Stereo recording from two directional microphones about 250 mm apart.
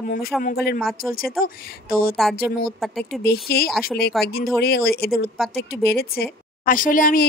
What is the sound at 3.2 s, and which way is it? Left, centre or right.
Speech, left.